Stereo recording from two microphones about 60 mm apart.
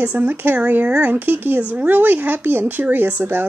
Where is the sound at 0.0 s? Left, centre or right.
Right.